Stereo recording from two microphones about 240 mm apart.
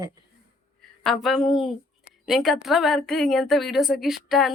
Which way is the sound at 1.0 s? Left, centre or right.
Centre.